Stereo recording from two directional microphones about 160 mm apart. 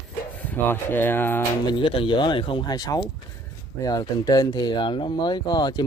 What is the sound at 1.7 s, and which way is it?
Speech, 30° left (ahead or behind).